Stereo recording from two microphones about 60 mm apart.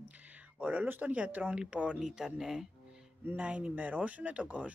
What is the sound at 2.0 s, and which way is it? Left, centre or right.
Speech, centre.